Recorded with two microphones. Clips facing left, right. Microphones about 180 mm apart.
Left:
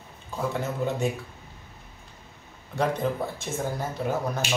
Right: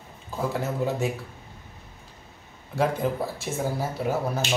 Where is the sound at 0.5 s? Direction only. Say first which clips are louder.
Right 1 dB; 5° right (ahead or behind).